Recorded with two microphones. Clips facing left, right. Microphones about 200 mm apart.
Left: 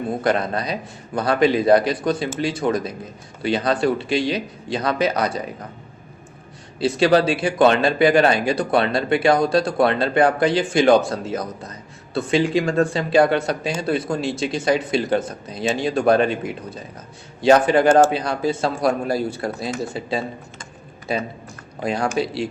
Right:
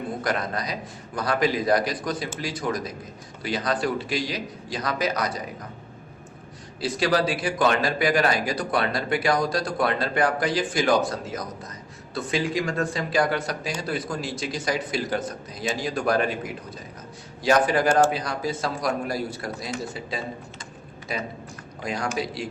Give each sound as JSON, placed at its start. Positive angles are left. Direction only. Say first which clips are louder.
{"t": 0.2, "sound": "speech", "louder": "left 7 dB", "side_deg": 30}
{"t": 6.7, "sound": "speech", "louder": "left 7 dB", "side_deg": 25}